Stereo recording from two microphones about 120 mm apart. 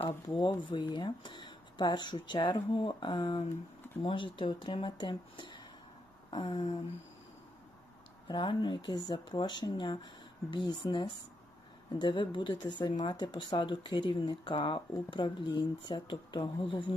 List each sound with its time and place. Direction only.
0.3 s speech: 40° left (ahead or behind)
8.3 s speech: 40° left (ahead or behind)